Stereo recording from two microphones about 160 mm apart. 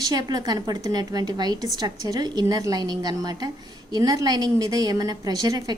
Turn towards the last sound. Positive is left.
turn(degrees=-25)  # may be behind; listen again after turning